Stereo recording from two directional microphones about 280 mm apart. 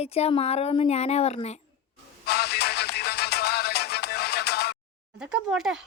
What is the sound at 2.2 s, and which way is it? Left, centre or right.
Music, left.